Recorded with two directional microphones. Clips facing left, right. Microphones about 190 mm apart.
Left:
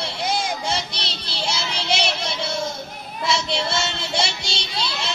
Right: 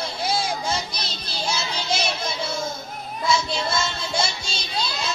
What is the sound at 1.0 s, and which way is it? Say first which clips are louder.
Child singing: left 1 dB; 80° left.